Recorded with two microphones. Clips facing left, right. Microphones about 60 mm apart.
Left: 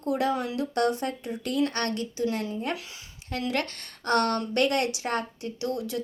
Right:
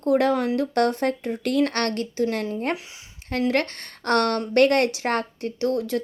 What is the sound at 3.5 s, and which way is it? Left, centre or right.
A woman's voice, right.